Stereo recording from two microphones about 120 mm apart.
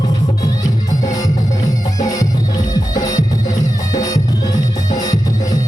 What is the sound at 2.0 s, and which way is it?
Music, 30° left (ahead or behind).